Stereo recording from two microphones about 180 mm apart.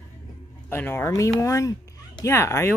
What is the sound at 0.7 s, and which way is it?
Speech, 10° left (ahead or behind).